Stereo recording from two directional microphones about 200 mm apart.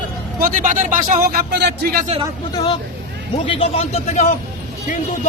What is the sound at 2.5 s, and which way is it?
A man's voice, 20° left (ahead or behind).